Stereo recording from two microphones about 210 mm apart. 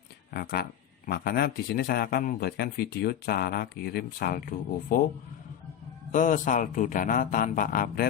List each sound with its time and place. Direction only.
0.3 s speech: 50° left (ahead or behind)
6.1 s speech: 40° left (ahead or behind)